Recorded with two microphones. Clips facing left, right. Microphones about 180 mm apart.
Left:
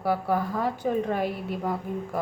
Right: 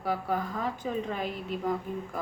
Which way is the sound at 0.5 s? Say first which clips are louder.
Left 6 dB; 65° left (ahead or behind).